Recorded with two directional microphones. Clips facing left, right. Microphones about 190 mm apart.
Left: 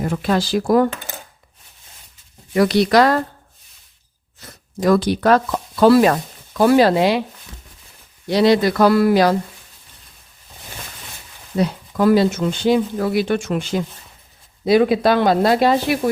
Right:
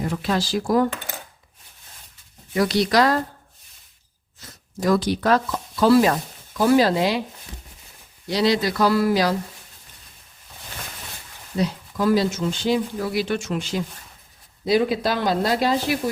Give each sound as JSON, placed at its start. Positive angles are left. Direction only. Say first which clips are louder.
{"t": 0.0, "sound": "speech", "louder": "left 4 dB", "side_deg": 50}
{"t": 2.6, "sound": "speech", "louder": "left 5 dB", "side_deg": 60}
{"t": 4.4, "sound": "a sound", "louder": "left 4 dB", "side_deg": 60}
{"t": 4.9, "sound": "speech", "louder": "left 4 dB", "side_deg": 60}
{"t": 8.3, "sound": "speech", "louder": "left 6 dB", "side_deg": 55}
{"t": 11.5, "sound": "speech", "louder": "left 4 dB", "side_deg": 60}